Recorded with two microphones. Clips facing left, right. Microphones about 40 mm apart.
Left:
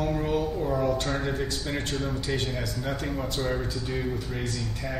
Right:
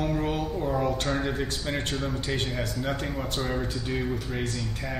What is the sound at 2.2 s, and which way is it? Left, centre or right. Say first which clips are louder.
Speech: even; right.